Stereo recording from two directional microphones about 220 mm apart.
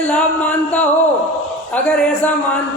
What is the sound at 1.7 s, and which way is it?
Speech, 5° left (ahead or behind).